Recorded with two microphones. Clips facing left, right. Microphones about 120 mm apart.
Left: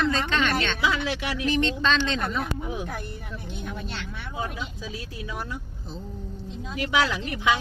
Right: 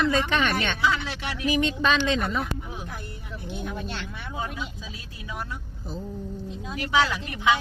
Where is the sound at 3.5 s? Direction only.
Centre (ahead or behind).